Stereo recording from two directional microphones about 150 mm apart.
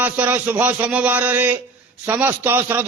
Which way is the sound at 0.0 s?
10° right (ahead or behind).